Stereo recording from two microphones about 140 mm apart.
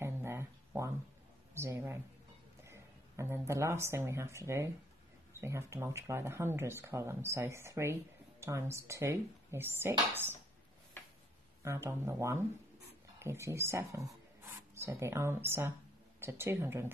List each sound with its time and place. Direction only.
0.0 s a sound: 20° right (ahead or behind)
1.5 s speech: 20° right (ahead or behind)
11.6 s speech: 20° right (ahead or behind)